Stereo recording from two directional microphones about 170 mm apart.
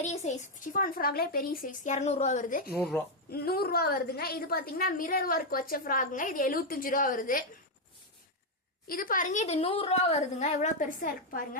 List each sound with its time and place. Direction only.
0.0 s speech: 40° left (ahead or behind)
3.2 s a woman's voice: 65° left (ahead or behind)
8.9 s speech: 55° left (ahead or behind)